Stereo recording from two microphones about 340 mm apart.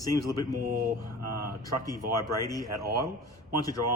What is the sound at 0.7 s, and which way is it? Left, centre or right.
Mantra, right.